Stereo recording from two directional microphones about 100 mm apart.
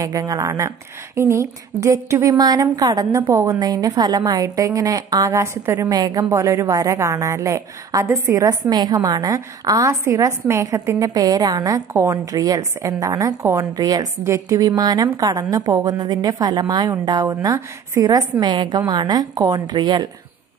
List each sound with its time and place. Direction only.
0.0 s a woman's voice: 40° right (ahead or behind)
5.9 s a woman's voice: 40° right (ahead or behind)
6.3 s a woman's voice: 30° right (ahead or behind)
14.8 s a woman's voice: 40° right (ahead or behind)
18.4 s a woman's voice: 45° right (ahead or behind)